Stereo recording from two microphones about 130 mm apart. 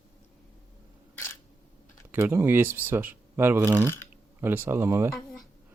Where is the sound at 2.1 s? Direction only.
20° right (ahead or behind).